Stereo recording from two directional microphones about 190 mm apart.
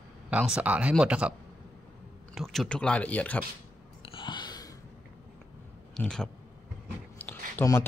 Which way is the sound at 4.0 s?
25° left (ahead or behind).